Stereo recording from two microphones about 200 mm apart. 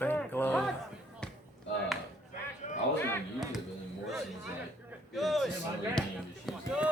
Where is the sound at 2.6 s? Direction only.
40° left (ahead or behind).